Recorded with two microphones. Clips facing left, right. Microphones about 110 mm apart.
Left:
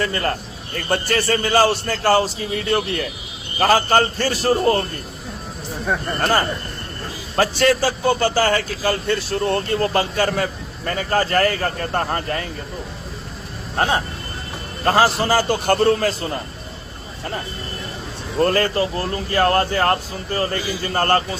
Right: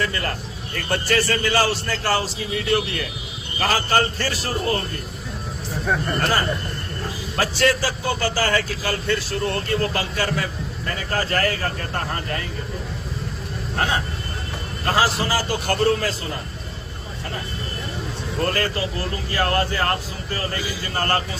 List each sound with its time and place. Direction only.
0.0 s speech: 40° left (ahead or behind)
2.6 s a man's voice: 45° left (ahead or behind)
5.8 s speech: 5° left (ahead or behind)
6.1 s speech: 40° left (ahead or behind)
7.9 s speech: 25° left (ahead or behind)
8.4 s speech: 40° left (ahead or behind)
13.7 s speech: 35° left (ahead or behind)
15.3 s a man's voice: 55° left (ahead or behind)
18.3 s speech: 30° left (ahead or behind)